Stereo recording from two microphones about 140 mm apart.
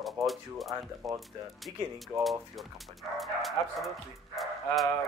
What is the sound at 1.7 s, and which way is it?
Speech, 35° right (ahead or behind).